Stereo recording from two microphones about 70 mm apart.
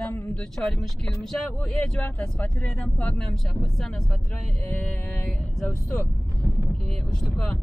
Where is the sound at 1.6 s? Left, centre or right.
Centre.